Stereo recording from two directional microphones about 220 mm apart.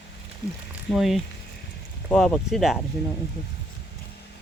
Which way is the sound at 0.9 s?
Centre (ahead or behind).